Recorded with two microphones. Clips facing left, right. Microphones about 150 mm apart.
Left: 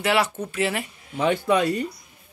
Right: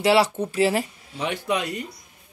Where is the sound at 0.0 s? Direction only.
30° right (ahead or behind).